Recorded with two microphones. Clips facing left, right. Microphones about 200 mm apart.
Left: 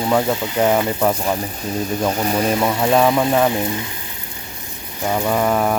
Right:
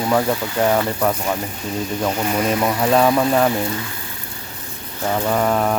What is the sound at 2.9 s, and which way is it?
Mantra, 5° left (ahead or behind).